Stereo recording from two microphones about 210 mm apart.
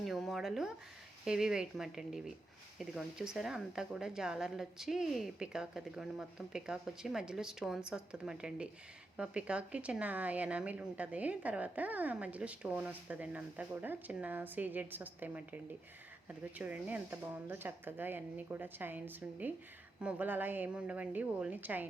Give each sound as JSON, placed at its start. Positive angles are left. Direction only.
{"t": 0.0, "sound": "a sound", "side_deg": 0}
{"t": 1.2, "sound": "speech", "side_deg": -5}
{"t": 16.6, "sound": "speech", "side_deg": -5}